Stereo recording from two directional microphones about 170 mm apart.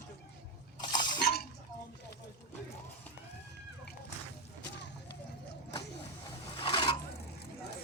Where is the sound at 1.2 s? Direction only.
65° left (ahead or behind).